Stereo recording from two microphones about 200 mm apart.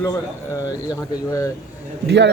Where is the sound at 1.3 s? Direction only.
15° left (ahead or behind).